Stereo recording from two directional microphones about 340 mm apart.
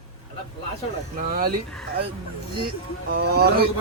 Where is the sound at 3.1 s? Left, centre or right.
Right.